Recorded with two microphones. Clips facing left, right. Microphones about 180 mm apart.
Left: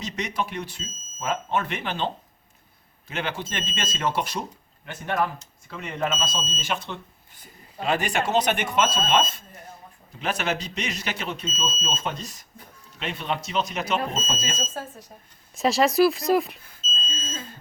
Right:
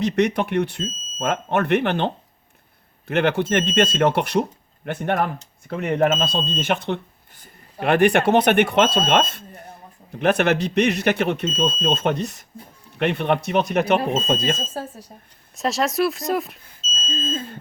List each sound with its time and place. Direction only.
0.0 s speech: 60° right (ahead or behind)
9.0 s smoke detector: 60° right (ahead or behind)
10.2 s speech: 60° right (ahead or behind)
14.6 s speech: 35° right (ahead or behind)
15.5 s speech: centre (ahead or behind)